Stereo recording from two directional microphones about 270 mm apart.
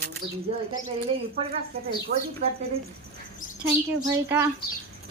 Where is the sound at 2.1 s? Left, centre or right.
Right.